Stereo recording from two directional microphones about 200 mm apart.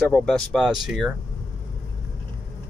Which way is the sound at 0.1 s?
5° left (ahead or behind).